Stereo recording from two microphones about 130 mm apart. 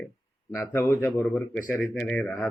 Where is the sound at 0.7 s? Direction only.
20° left (ahead or behind).